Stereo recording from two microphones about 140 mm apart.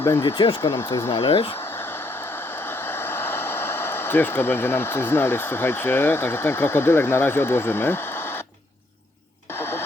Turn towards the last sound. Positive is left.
turn(degrees=15)  # may be behind; listen again after turning